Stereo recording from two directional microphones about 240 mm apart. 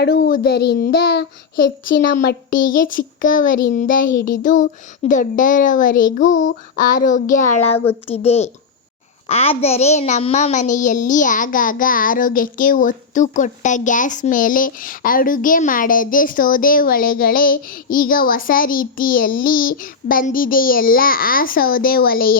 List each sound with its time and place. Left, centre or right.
0.0 s a child's voice: left
2.5 s a child's voice: left
6.2 s a child's voice: left
6.7 s a child's voice: left